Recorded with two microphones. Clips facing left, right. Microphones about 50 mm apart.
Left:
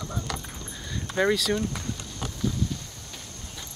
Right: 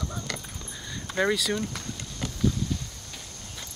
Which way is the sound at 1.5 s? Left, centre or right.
Centre.